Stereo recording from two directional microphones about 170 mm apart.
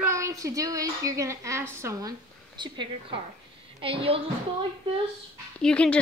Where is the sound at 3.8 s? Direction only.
30° right (ahead or behind).